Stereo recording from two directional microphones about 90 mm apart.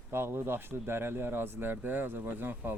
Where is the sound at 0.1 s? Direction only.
25° right (ahead or behind).